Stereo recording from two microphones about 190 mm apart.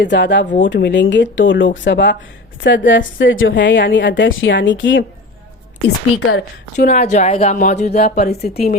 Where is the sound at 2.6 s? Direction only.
75° left (ahead or behind).